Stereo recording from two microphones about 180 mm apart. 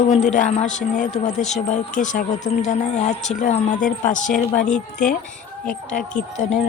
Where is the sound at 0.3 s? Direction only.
45° left (ahead or behind).